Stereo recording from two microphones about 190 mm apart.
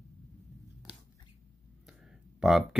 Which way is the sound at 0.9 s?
5° right (ahead or behind).